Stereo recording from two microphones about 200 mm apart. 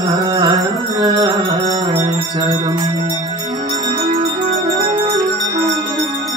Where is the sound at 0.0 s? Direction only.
15° right (ahead or behind).